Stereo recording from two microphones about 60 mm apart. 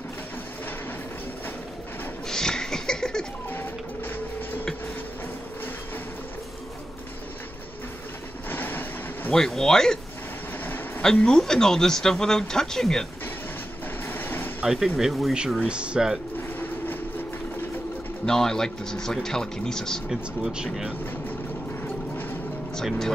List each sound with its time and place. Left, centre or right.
2.2 s a sound: centre
3.4 s printer: left
8.5 s vehicle: left
9.3 s speech: centre
11.0 s speech: centre
14.0 s vehicle: left
14.6 s speech: centre
16.3 s vehicle: left
18.2 s speech: centre
20.1 s speech: centre
21.8 s music: left